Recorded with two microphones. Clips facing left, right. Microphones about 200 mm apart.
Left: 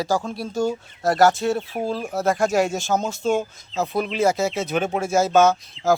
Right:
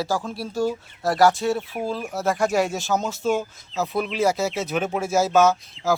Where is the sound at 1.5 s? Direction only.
30° left (ahead or behind).